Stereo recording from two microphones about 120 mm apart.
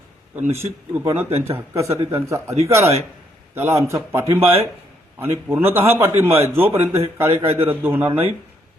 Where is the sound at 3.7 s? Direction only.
25° right (ahead or behind).